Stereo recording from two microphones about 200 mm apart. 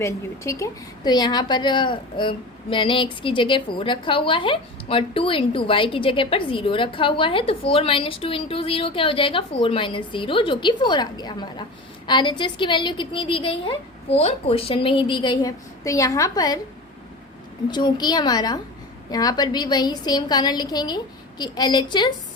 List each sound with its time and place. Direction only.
0.0 s a woman's voice: 15° left (ahead or behind)
17.7 s a woman's voice: 20° left (ahead or behind)